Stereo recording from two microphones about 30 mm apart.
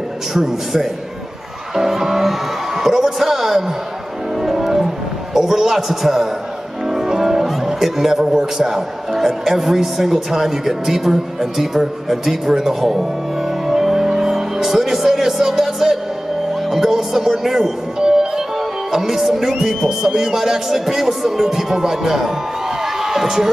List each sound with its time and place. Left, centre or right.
0.3 s a man's voice: centre
4.4 s music: centre
8.2 s a man's voice: right
13.7 s music: centre
16.7 s a man's voice: centre